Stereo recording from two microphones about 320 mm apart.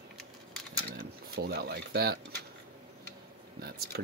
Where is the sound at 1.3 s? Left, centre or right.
Right.